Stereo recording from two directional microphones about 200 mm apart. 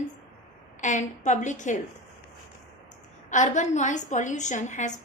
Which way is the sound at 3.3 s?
40° left (ahead or behind).